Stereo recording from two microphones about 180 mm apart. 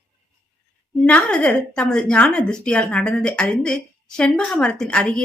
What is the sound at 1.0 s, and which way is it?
A woman's voice, 5° left (ahead or behind).